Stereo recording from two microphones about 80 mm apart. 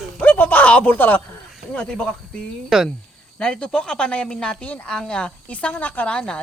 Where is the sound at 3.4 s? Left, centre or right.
Centre.